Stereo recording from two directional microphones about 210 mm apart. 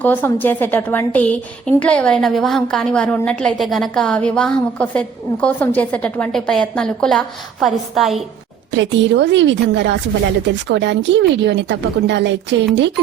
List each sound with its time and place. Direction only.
0.0 s a woman's voice: 10° left (ahead or behind)
8.7 s speech: 60° right (ahead or behind)